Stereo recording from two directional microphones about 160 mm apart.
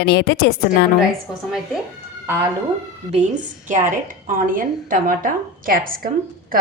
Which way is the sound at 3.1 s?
50° right (ahead or behind).